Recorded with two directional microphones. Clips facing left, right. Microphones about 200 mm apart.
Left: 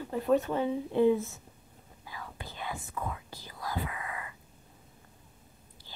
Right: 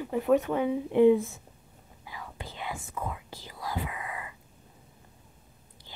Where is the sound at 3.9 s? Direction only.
20° right (ahead or behind).